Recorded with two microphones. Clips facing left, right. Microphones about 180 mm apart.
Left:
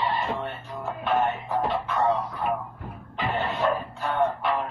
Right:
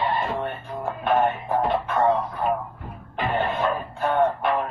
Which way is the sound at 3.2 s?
50° right (ahead or behind).